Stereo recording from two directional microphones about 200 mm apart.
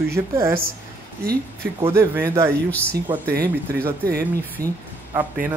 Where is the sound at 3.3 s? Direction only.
50° right (ahead or behind).